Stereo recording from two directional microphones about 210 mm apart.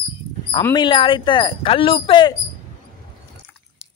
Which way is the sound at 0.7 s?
20° left (ahead or behind).